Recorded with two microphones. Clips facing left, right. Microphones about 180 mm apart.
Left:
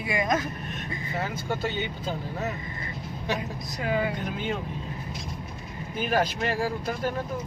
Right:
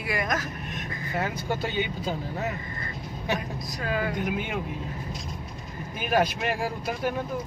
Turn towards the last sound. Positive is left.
turn(degrees=-15)  # may be behind; listen again after turning